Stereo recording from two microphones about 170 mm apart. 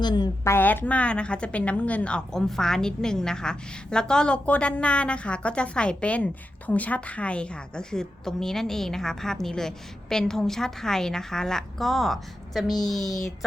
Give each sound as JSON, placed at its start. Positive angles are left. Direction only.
{"t": 0.0, "sound": "a woman's voice", "side_deg": 25}
{"t": 0.5, "sound": "a woman's voice", "side_deg": 10}